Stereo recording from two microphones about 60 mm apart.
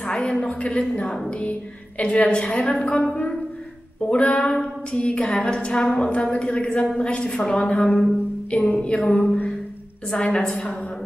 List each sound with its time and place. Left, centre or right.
0.0 s a woman's voice: centre
8.5 s music: left
8.8 s a woman's voice: left